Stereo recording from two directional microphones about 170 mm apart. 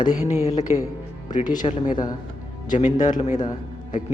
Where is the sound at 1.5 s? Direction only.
25° left (ahead or behind).